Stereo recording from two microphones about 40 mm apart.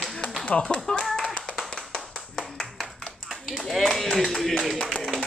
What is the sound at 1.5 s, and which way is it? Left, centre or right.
Clapping, centre.